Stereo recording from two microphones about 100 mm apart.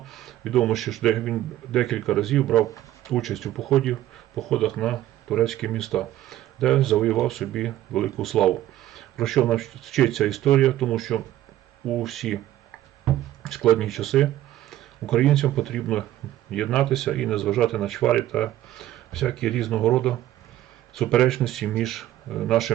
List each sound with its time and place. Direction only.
0.0 s speech: centre (ahead or behind)
13.4 s speech: 5° left (ahead or behind)
14.7 s a sound: 5° left (ahead or behind)
15.5 s speech: 5° left (ahead or behind)